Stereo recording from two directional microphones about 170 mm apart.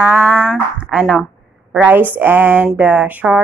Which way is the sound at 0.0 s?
10° right (ahead or behind).